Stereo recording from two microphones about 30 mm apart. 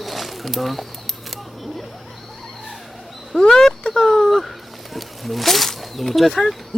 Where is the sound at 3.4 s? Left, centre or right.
Centre.